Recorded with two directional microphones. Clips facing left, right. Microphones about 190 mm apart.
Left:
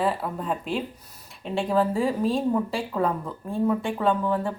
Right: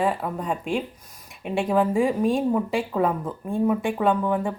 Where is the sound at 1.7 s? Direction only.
15° right (ahead or behind).